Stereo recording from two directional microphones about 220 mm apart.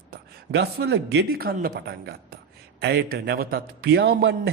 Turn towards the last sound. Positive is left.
turn(degrees=-50)  # may be behind; listen again after turning